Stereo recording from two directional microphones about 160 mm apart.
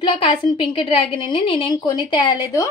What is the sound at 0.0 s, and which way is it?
Speech, 35° left (ahead or behind).